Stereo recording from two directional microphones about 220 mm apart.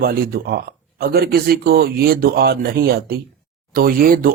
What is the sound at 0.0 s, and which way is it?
Speech, 45° right (ahead or behind).